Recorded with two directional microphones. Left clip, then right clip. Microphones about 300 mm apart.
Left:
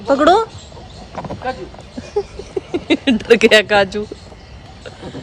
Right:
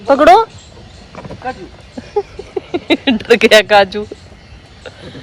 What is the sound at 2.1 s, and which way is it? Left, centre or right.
Speech, centre.